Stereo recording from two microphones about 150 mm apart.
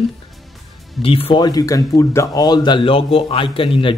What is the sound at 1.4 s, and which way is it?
Speech, 25° left (ahead or behind).